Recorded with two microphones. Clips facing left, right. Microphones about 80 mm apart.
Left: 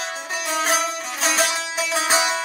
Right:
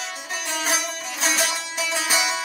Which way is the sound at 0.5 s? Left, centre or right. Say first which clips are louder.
Left 5 dB; left.